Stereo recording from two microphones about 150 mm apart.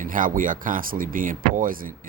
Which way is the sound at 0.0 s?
65° right (ahead or behind).